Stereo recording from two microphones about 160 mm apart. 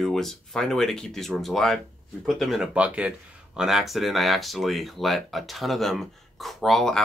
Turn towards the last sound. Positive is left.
turn(degrees=0)  # may be behind; listen again after turning